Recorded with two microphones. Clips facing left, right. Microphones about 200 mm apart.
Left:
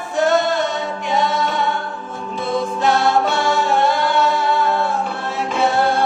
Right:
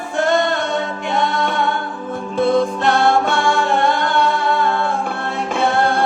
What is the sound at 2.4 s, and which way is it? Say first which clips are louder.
Music: right 5 dB; 55° right (ahead or behind).